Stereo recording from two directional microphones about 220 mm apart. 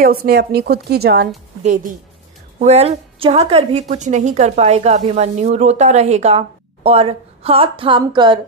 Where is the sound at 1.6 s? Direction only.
35° right (ahead or behind).